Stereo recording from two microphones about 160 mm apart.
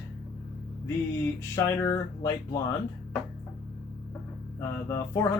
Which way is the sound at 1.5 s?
20° left (ahead or behind).